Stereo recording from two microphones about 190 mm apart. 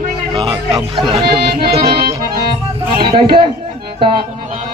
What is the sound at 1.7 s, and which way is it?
Accordion, 30° right (ahead or behind).